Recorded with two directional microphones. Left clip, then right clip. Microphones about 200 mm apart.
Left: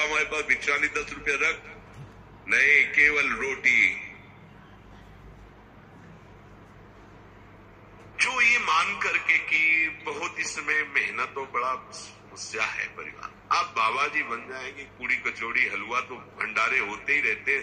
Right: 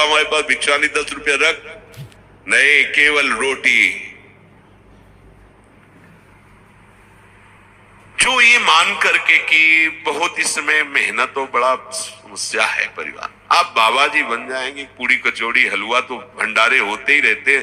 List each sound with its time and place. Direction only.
0.0 s a man's voice: 40° right (ahead or behind)
8.1 s a man's voice: 45° right (ahead or behind)